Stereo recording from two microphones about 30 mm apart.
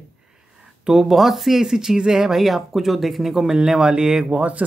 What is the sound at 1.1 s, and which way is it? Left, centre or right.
Speech, centre.